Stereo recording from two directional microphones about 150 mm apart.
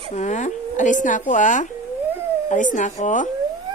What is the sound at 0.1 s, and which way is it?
A woman's voice, 50° left (ahead or behind).